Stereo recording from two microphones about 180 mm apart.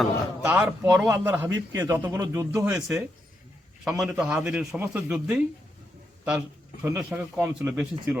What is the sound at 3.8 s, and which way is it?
Speech, centre (ahead or behind).